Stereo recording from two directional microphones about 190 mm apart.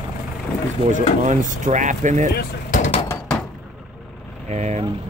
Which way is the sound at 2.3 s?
40° left (ahead or behind).